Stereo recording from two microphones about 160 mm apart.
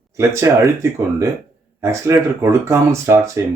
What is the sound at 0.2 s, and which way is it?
Speech, 20° right (ahead or behind).